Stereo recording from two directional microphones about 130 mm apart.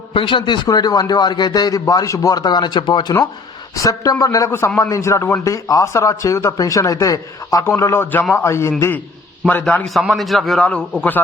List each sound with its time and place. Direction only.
0.1 s a man's voice: 40° left (ahead or behind); by 8.7 s 20° left (ahead or behind)
10.1 s a man's voice: centre (ahead or behind)